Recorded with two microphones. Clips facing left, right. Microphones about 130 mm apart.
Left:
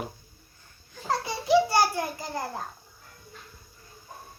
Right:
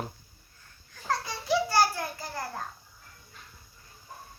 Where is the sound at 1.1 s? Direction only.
15° left (ahead or behind).